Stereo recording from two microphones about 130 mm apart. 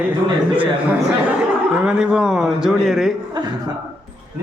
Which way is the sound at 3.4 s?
30° right (ahead or behind).